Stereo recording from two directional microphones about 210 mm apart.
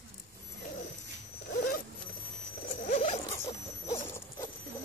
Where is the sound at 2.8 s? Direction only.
35° left (ahead or behind).